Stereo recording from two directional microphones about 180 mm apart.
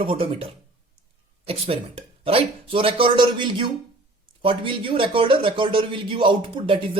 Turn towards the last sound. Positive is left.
turn(degrees=-30)  # may be behind; listen again after turning